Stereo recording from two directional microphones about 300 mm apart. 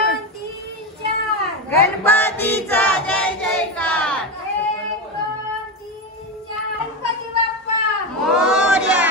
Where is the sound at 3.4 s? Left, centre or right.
Centre.